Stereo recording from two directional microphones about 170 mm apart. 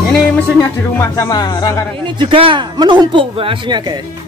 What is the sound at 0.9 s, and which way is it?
Speech, 20° left (ahead or behind).